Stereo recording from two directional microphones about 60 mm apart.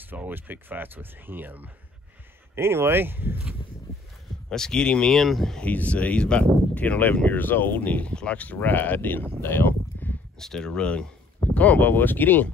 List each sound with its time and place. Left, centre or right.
0.0 s speech: right
2.5 s speech: right
4.5 s speech: centre
5.1 s speech: centre
5.6 s speech: left
9.4 s a sound: left
10.4 s speech: centre; by 12.4 s left